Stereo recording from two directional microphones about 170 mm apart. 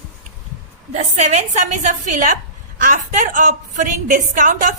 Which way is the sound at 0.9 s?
45° right (ahead or behind).